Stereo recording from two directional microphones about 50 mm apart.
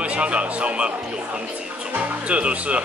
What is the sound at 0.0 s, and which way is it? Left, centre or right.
Speech, right.